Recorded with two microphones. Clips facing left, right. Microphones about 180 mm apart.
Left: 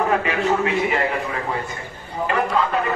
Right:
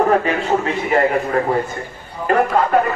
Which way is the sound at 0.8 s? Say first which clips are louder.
Right 6 dB; 45° right (ahead or behind).